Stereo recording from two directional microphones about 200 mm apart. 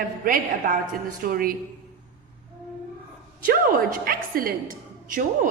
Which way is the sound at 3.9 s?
45° right (ahead or behind).